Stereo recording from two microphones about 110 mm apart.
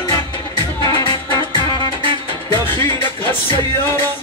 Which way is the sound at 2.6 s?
20° left (ahead or behind).